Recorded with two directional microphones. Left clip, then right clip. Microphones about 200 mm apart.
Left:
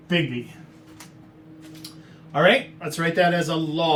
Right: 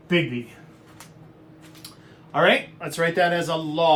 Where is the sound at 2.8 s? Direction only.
25° right (ahead or behind).